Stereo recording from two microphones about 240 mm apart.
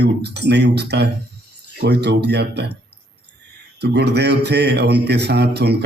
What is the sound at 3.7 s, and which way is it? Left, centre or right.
A man's voice, right.